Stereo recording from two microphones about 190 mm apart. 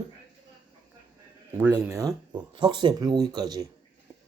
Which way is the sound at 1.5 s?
15° right (ahead or behind).